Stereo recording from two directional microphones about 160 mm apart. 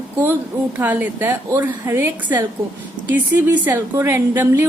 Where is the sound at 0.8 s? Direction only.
10° right (ahead or behind).